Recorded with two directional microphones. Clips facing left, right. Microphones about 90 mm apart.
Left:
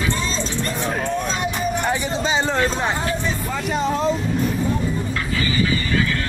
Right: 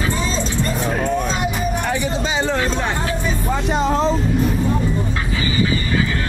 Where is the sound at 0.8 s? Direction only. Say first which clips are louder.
Right 2 dB; 5° right (ahead or behind).